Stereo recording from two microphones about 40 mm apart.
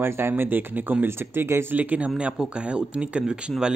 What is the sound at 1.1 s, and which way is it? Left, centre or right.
Speech, right.